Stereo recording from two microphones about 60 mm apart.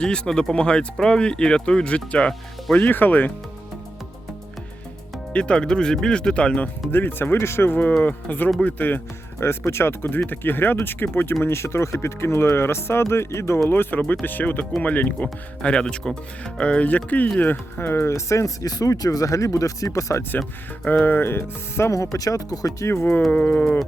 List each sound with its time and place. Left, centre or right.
0.0 s speech: centre
2.8 s speech: left
5.3 s speech: centre
6.9 s speech: left
9.4 s speech: left
11.4 s speech: left
13.7 s speech: left
18.1 s speech: left
20.8 s speech: left
21.9 s speech: left
23.3 s speech: left